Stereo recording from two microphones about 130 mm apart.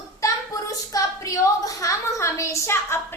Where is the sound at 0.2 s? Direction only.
25° left (ahead or behind).